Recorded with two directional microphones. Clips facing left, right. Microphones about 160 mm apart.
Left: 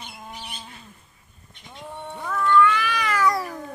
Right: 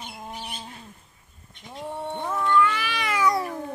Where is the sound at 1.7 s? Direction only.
35° right (ahead or behind).